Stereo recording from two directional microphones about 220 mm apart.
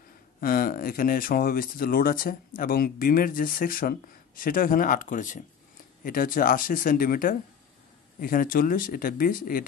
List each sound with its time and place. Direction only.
0.4 s speech: 40° left (ahead or behind)